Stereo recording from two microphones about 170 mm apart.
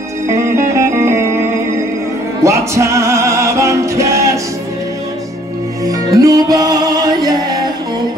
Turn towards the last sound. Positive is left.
turn(degrees=-20)  # may be behind; listen again after turning